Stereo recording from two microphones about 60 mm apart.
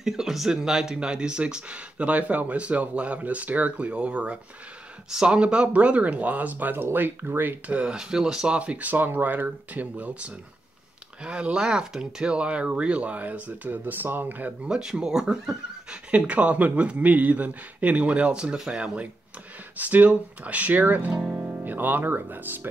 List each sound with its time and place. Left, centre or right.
0.0 s speech: centre; by 7.7 s right
7.7 s speech: centre
11.2 s speech: centre
14.7 s speech: centre
19.8 s speech: right
21.5 s speech: right